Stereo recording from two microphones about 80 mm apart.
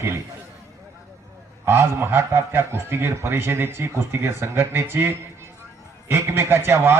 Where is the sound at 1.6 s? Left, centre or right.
Right.